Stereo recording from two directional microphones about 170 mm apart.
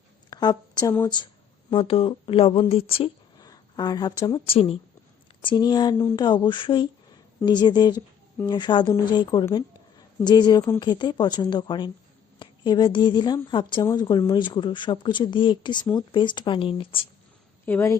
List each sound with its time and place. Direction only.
0.3 s a woman's voice: 25° left (ahead or behind)
3.4 s speech: 20° left (ahead or behind)
17.7 s a woman's voice: 15° left (ahead or behind)